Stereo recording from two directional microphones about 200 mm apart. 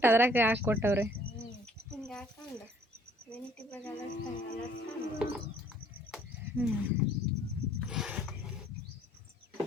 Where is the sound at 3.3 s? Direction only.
5° left (ahead or behind).